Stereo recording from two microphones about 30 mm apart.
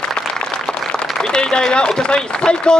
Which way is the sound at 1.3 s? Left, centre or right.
Left.